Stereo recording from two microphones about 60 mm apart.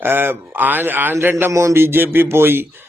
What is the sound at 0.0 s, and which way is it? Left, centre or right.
A man's voice, right.